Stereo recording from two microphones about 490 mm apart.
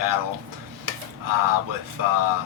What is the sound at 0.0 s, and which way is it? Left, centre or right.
Speech, right.